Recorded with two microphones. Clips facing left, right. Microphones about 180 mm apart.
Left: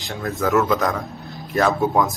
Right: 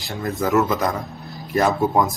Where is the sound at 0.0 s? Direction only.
Centre (ahead or behind).